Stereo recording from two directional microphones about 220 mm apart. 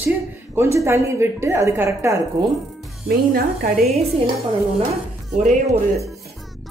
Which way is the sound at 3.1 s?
40° right (ahead or behind).